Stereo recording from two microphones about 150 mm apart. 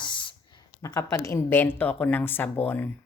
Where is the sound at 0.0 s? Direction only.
35° left (ahead or behind).